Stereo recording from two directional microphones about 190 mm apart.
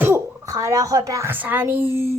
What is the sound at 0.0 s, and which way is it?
A child's voice, 15° right (ahead or behind).